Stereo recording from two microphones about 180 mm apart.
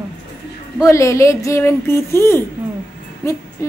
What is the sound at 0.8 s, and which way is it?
A woman's voice, 15° left (ahead or behind).